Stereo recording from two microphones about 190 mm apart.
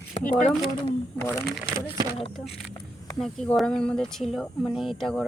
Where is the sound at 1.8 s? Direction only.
15° right (ahead or behind).